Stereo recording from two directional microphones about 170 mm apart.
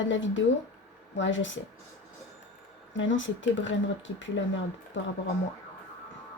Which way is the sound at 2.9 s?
90° left.